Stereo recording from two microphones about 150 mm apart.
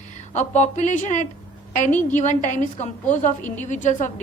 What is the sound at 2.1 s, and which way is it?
A woman's voice, 55° left (ahead or behind).